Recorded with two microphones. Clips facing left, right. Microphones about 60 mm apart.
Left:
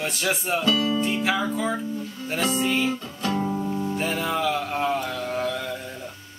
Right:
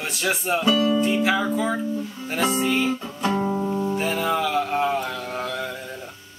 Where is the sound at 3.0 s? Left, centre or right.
Centre.